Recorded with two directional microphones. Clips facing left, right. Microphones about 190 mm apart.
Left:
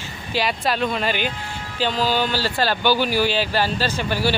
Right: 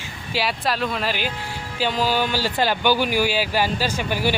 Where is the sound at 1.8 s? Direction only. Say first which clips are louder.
Left 1 dB; 10° right (ahead or behind).